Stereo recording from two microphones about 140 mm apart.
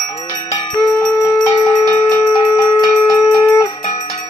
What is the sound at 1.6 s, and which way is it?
Bell, 25° left (ahead or behind).